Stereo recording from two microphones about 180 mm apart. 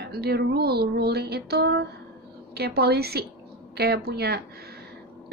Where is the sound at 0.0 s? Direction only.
60° right (ahead or behind).